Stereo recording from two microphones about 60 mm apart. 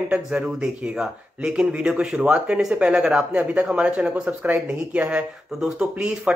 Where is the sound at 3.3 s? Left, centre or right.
Right.